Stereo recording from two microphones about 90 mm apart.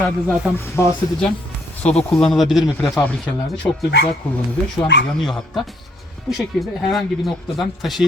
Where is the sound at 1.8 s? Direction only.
10° left (ahead or behind).